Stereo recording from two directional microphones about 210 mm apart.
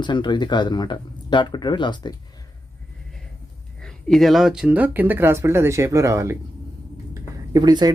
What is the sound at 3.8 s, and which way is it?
Speech, centre (ahead or behind).